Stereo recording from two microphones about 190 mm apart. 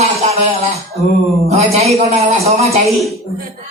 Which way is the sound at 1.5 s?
35° right (ahead or behind).